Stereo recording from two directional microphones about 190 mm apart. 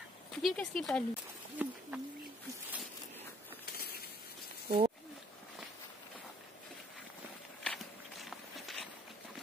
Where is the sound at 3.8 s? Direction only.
55° left (ahead or behind).